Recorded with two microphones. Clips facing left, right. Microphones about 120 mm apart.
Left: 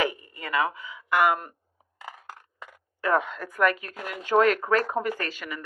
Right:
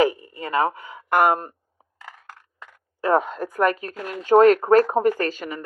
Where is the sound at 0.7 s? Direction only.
50° right (ahead or behind); by 1.5 s 35° right (ahead or behind).